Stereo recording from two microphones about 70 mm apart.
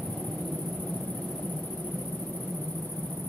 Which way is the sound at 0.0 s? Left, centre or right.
Centre.